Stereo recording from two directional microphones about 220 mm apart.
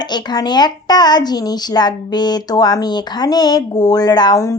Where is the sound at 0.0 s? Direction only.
20° left (ahead or behind).